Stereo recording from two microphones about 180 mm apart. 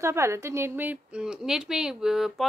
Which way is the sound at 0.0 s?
15° right (ahead or behind).